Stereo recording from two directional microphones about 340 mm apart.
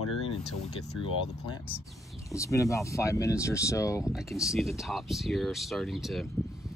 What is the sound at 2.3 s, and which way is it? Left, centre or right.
Speech, centre.